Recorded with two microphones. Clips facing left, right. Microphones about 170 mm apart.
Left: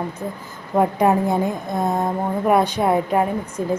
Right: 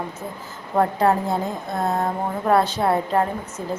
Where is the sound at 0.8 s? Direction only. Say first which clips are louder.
Left 2 dB; 15° left (ahead or behind).